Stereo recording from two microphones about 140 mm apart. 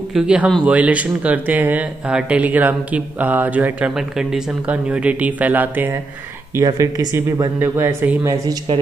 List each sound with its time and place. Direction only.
0.1 s speech: 5° right (ahead or behind)
6.5 s speech: 25° right (ahead or behind)